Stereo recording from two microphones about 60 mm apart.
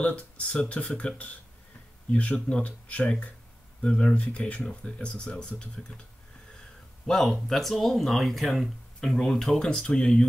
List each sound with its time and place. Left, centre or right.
0.0 s speech: left
7.1 s speech: centre